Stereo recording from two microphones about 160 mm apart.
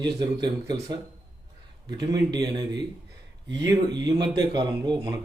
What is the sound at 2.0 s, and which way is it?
A man's voice, 25° right (ahead or behind).